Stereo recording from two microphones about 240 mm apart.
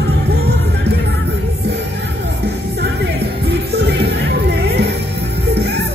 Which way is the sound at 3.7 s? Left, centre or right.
Right.